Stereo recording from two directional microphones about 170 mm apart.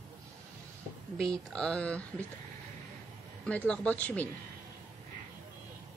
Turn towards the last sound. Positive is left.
turn(degrees=10)  # may be behind; listen again after turning